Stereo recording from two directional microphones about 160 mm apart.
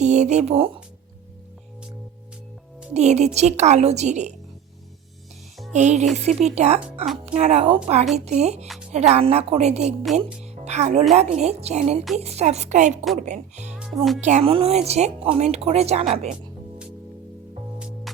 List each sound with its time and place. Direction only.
0.0 s a woman's voice: 45° right (ahead or behind)
2.9 s a woman's voice: 45° right (ahead or behind)
5.7 s a woman's voice: 45° right (ahead or behind)
13.7 s music: centre (ahead or behind)
14.2 s speech: 45° right (ahead or behind)